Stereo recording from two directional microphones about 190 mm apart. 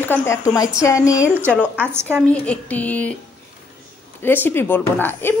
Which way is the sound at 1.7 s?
10° right (ahead or behind).